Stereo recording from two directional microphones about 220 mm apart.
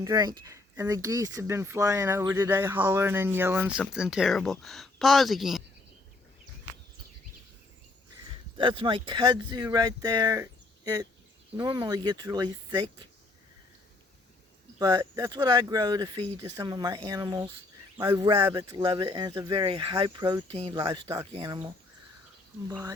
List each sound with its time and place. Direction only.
0.0 s speech: 15° right (ahead or behind)
8.5 s speech: 25° right (ahead or behind)
14.8 s speech: 15° right (ahead or behind)
22.7 s speech: 15° right (ahead or behind)